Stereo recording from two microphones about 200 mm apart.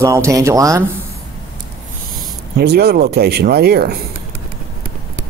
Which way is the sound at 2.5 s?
55° right (ahead or behind).